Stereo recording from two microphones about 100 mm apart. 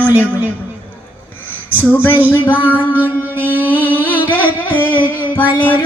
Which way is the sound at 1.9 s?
20° left (ahead or behind).